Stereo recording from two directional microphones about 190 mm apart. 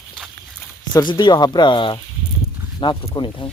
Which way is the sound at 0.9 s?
20° left (ahead or behind).